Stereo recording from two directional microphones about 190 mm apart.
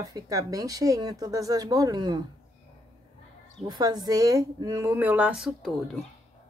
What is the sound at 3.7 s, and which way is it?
A woman's voice, 20° right (ahead or behind).